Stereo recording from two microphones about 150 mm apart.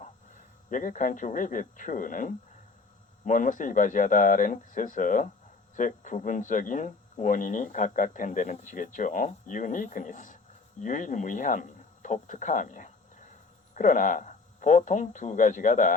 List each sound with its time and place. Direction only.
0.7 s speech: 60° left (ahead or behind)